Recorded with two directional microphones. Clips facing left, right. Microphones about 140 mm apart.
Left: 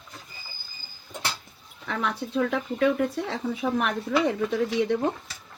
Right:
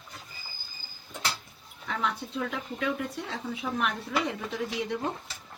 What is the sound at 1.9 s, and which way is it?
Speech, 65° left (ahead or behind).